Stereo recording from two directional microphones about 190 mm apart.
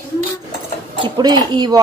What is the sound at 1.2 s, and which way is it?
Speech, 20° right (ahead or behind).